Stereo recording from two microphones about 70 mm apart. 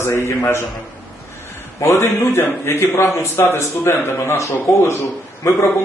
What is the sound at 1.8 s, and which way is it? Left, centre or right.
A man's voice, left.